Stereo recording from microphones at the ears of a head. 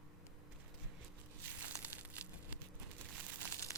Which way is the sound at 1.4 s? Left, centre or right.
Right.